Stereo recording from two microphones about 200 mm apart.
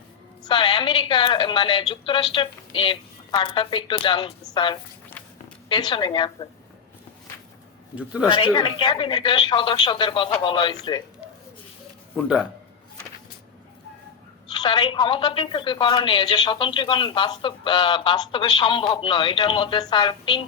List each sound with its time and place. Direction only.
0.4 s a woman's voice: 25° left (ahead or behind)
7.9 s a man's voice: 5° right (ahead or behind)
8.3 s a woman's voice: 25° left (ahead or behind)
12.1 s a man's voice: 5° right (ahead or behind)
14.5 s a woman's voice: 20° left (ahead or behind)